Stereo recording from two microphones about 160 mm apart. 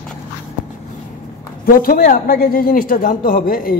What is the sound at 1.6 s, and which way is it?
Speech, 65° left (ahead or behind).